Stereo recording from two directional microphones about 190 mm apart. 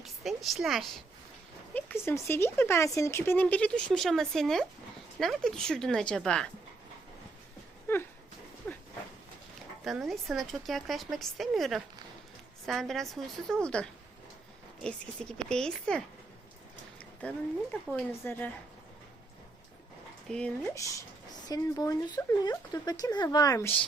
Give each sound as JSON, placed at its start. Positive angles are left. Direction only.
{"t": 0.0, "sound": "a woman's voice", "side_deg": 0}
{"t": 1.7, "sound": "speech", "side_deg": 10}
{"t": 8.7, "sound": "a sound", "side_deg": 5}
{"t": 9.8, "sound": "speech", "side_deg": 0}
{"t": 17.2, "sound": "speech", "side_deg": 5}
{"t": 20.2, "sound": "speech", "side_deg": 5}
{"t": 20.7, "sound": "speech", "side_deg": 15}